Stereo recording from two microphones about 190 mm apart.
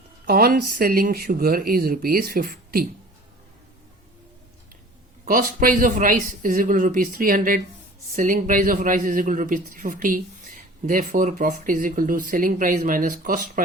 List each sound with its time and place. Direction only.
0.3 s a man's voice: 50° right (ahead or behind)
5.2 s a man's voice: 45° right (ahead or behind)